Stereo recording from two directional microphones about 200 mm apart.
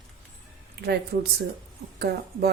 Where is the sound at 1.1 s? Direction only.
50° right (ahead or behind).